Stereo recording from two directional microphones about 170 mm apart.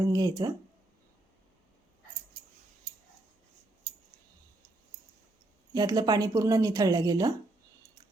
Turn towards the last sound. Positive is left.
turn(degrees=-25)  # may be behind; listen again after turning